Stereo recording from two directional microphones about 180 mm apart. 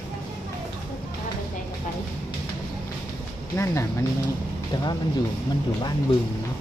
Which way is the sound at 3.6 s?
20° left (ahead or behind).